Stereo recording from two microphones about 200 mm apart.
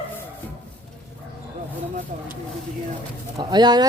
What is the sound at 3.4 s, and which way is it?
Speech, 20° right (ahead or behind).